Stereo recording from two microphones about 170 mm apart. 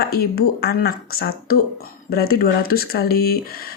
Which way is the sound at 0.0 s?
65° left (ahead or behind).